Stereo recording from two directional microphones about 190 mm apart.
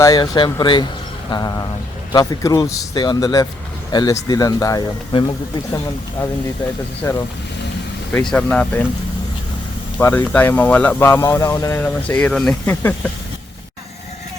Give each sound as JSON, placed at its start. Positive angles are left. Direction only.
{"t": 0.0, "sound": "speech", "side_deg": 20}
{"t": 7.0, "sound": "speech", "side_deg": 15}
{"t": 8.1, "sound": "speech", "side_deg": 5}
{"t": 10.0, "sound": "speech", "side_deg": 10}